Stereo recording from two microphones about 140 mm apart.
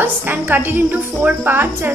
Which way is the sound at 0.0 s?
15° right (ahead or behind).